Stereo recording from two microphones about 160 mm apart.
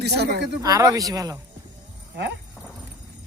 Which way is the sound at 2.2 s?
90° right.